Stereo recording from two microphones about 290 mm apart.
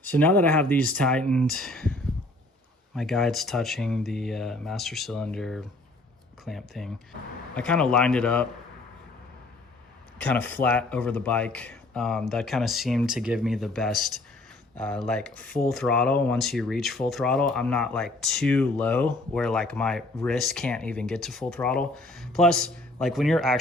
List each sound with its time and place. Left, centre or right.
0.1 s speech: centre
10.2 s speech: centre